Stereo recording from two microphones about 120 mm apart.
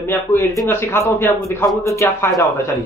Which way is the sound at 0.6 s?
20° left (ahead or behind).